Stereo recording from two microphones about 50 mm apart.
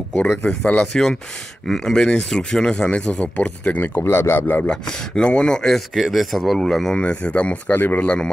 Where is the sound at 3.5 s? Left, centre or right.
Left.